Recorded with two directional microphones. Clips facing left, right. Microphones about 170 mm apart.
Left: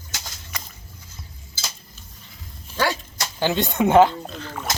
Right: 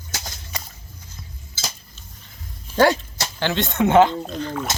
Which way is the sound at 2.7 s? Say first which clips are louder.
Right 7 dB; 35° right (ahead or behind).